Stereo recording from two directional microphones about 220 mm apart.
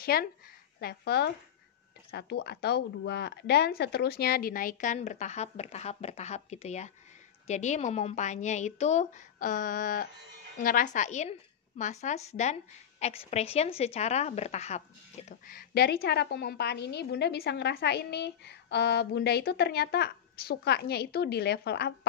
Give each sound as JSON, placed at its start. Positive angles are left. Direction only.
{"t": 0.0, "sound": "a woman's voice", "side_deg": 45}